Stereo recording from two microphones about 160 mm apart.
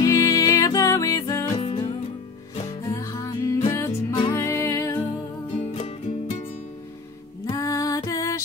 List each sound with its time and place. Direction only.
0.0 s music: 20° left (ahead or behind)
1.6 s music: 35° left (ahead or behind)
2.8 s music: 20° left (ahead or behind)
4.1 s music: 30° left (ahead or behind)
4.4 s music: 15° left (ahead or behind)
5.6 s music: 40° left (ahead or behind)
7.4 s music: 20° left (ahead or behind)